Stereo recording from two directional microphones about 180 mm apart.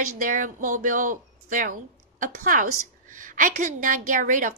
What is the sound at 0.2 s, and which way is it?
A woman's voice, 45° right (ahead or behind).